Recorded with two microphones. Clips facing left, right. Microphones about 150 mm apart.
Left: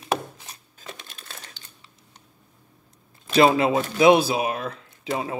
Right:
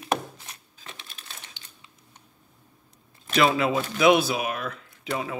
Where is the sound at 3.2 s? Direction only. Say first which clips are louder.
Left 4 dB; 30° left (ahead or behind).